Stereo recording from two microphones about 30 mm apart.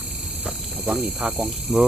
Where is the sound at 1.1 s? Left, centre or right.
Right.